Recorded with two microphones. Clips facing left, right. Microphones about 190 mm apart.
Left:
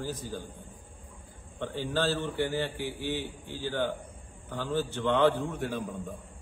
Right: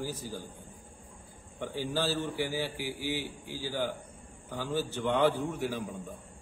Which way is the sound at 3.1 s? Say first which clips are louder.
Left 1 dB; 60° left (ahead or behind).